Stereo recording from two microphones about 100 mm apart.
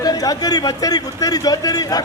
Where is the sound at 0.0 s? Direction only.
40° left (ahead or behind).